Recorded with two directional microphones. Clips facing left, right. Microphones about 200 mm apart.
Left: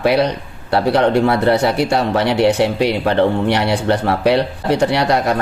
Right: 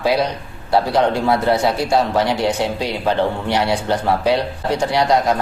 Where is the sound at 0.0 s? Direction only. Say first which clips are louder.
Left 3 dB; 60° left (ahead or behind).